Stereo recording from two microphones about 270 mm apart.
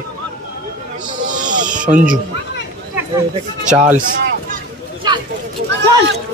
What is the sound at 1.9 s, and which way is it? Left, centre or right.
Speech, right.